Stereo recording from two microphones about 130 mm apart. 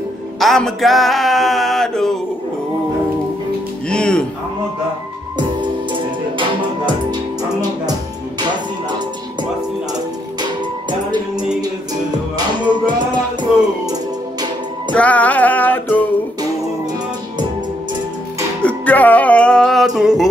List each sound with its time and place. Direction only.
0.4 s male singing: 5° left (ahead or behind)
3.9 s music: 5° left (ahead or behind)
5.6 s music: 40° right (ahead or behind)
9.9 s music: 35° right (ahead or behind)
14.9 s music: 10° left (ahead or behind)
18.6 s music: 10° left (ahead or behind)